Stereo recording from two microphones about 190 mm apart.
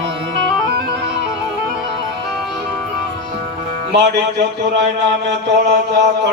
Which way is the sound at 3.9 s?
65° right (ahead or behind).